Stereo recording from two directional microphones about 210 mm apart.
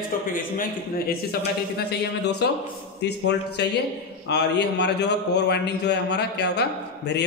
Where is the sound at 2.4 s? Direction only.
50° left (ahead or behind).